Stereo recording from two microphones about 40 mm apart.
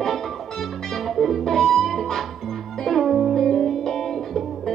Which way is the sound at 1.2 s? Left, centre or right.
Centre.